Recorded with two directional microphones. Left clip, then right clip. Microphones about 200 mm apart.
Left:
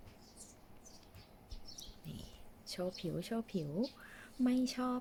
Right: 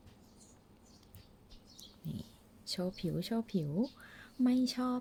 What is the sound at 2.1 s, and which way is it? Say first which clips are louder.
Speech: right 4 dB; 25° right (ahead or behind).